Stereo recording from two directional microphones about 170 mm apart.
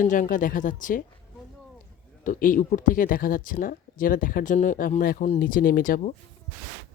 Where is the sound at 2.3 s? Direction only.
55° left (ahead or behind).